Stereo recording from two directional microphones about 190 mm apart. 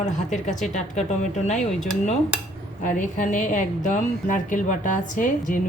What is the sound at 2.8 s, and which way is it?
A woman's voice, 45° left (ahead or behind).